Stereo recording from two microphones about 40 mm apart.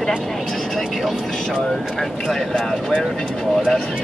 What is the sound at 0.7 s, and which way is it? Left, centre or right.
Speech, centre.